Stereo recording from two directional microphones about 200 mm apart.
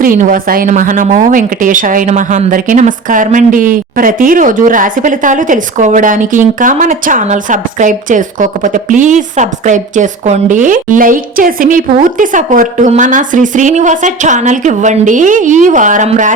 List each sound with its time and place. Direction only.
0.0 s a woman's voice: 45° right (ahead or behind)